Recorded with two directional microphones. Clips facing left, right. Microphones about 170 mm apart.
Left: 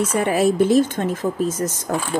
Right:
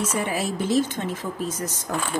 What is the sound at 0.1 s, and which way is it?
Speech, 55° left (ahead or behind).